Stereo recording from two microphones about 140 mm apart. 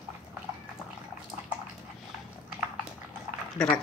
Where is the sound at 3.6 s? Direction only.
5° left (ahead or behind).